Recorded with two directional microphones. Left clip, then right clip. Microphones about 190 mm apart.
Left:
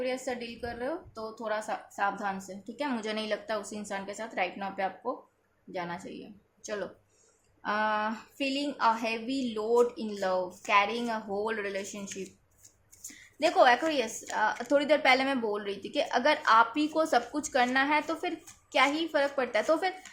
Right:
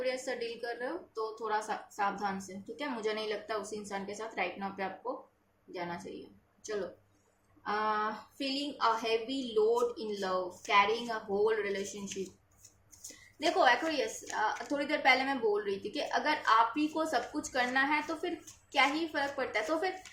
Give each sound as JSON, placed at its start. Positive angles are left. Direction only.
{"t": 0.0, "sound": "a woman's voice", "side_deg": 45}
{"t": 7.6, "sound": "a woman's voice", "side_deg": 50}
{"t": 13.4, "sound": "a woman's voice", "side_deg": 50}